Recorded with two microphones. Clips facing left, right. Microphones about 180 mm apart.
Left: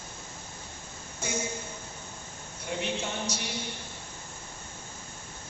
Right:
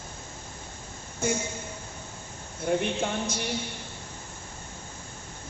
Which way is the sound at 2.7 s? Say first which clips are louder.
Right 9 dB; 50° right (ahead or behind).